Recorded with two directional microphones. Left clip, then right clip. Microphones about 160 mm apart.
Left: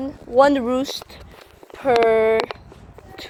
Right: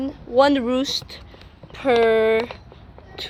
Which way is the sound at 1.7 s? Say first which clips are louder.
Left 1 dB; 25° right (ahead or behind).